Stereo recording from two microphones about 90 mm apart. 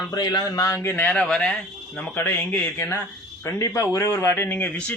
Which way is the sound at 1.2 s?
10° left (ahead or behind).